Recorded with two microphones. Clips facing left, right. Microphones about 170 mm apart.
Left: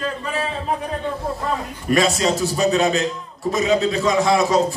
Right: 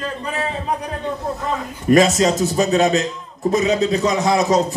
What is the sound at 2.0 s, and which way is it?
Speech, 20° right (ahead or behind).